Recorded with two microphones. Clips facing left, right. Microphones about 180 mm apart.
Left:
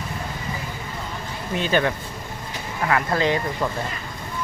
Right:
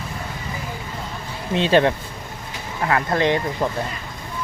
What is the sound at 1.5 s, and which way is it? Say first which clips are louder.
Speech: right 5 dB; 25° right (ahead or behind).